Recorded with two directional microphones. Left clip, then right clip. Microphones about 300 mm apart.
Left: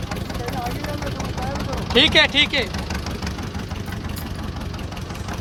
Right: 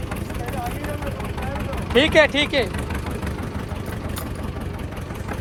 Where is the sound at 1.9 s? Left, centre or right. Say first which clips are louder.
Even; centre.